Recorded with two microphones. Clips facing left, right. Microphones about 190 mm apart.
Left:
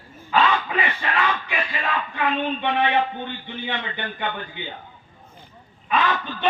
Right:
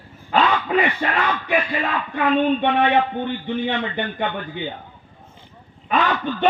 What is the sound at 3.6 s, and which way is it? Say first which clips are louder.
Speech: right 6 dB; 45° right (ahead or behind).